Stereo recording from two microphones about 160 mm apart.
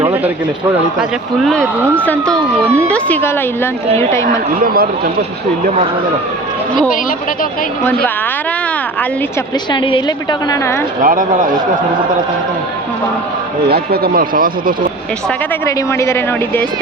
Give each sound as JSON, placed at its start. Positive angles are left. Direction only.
{"t": 1.5, "sound": "a woman's voice", "side_deg": 5}
{"t": 4.6, "sound": "a man's voice", "side_deg": -65}
{"t": 9.7, "sound": "a woman's voice", "side_deg": 30}
{"t": 11.0, "sound": "a man's voice", "side_deg": -55}
{"t": 13.7, "sound": "speech", "side_deg": -80}
{"t": 15.6, "sound": "a woman's voice", "side_deg": 15}